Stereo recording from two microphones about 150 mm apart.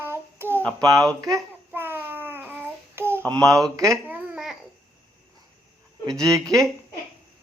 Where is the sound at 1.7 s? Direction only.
15° right (ahead or behind).